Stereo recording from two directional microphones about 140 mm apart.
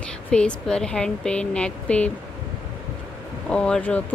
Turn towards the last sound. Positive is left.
turn(degrees=10)  # may be behind; listen again after turning